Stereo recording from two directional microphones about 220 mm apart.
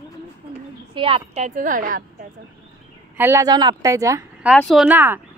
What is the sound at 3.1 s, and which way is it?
A woman's voice, 10° right (ahead or behind).